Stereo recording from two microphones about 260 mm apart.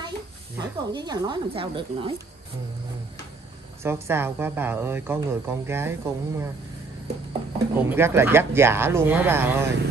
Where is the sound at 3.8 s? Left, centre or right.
Centre.